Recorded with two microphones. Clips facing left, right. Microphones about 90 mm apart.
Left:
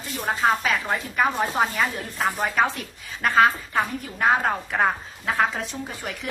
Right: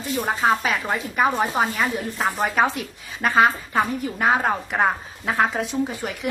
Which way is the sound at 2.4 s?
15° right (ahead or behind).